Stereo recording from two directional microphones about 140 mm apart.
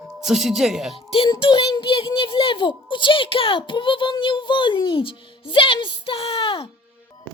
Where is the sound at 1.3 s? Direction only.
35° left (ahead or behind).